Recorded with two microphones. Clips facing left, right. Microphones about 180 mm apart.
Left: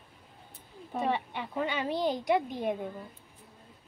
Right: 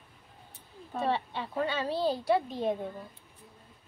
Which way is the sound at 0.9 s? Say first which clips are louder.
Even; 15° left (ahead or behind).